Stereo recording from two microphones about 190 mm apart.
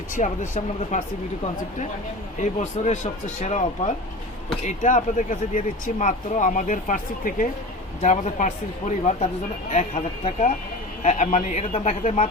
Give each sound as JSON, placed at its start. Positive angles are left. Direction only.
{"t": 0.2, "sound": "speech", "side_deg": 40}
{"t": 2.4, "sound": "speech", "side_deg": 40}